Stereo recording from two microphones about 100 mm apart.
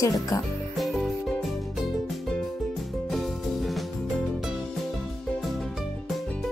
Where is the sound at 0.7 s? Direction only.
Centre (ahead or behind).